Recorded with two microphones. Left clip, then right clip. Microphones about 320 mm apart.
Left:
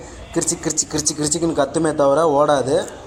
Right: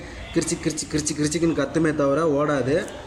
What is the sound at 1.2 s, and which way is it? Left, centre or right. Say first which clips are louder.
Speech: left 3 dB; left.